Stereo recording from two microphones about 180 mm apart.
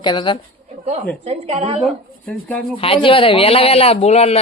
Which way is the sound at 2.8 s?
30° left (ahead or behind).